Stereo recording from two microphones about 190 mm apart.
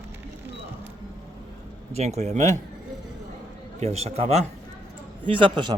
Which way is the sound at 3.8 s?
35° right (ahead or behind).